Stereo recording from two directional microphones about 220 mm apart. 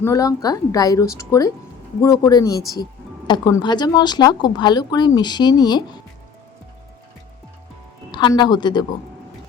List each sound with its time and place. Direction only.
0.0 s a woman's voice: 15° left (ahead or behind)
8.1 s speech: 20° left (ahead or behind)